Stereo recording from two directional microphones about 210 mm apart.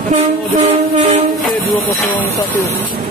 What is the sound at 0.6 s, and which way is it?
Train, 30° right (ahead or behind).